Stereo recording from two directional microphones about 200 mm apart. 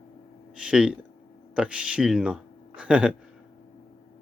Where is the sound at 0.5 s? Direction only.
5° right (ahead or behind).